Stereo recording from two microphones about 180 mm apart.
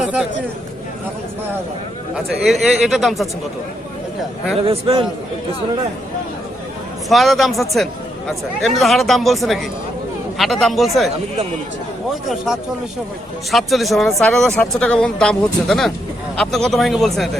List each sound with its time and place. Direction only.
0.0 s speech: 5° right (ahead or behind)
2.1 s speech: centre (ahead or behind)
4.6 s a man's voice: 30° right (ahead or behind)
7.1 s speech: centre (ahead or behind)
13.5 s speech: centre (ahead or behind)